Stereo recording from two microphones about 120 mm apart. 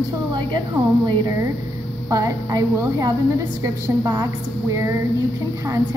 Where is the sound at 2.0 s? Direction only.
30° right (ahead or behind).